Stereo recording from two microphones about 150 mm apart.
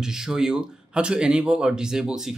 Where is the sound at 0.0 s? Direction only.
5° right (ahead or behind).